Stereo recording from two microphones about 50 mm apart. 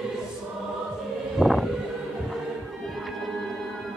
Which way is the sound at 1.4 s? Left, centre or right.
Centre.